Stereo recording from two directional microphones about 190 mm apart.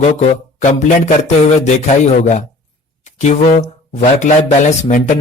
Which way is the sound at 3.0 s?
35° left (ahead or behind).